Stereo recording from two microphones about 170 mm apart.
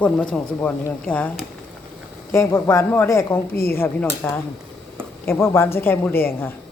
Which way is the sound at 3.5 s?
65° left (ahead or behind).